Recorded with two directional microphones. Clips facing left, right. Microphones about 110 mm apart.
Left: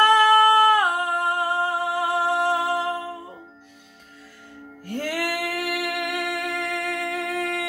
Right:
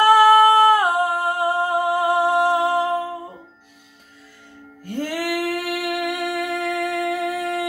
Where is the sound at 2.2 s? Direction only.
15° right (ahead or behind).